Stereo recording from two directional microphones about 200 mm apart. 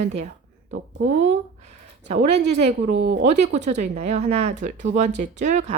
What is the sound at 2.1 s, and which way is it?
Speech, 35° right (ahead or behind).